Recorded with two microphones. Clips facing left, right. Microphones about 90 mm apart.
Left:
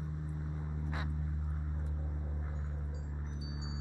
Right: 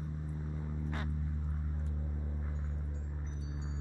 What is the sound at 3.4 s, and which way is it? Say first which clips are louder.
Chime: even; 15° left (ahead or behind).